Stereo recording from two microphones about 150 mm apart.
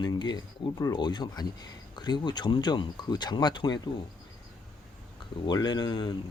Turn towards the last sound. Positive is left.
turn(degrees=30)  # may be behind; listen again after turning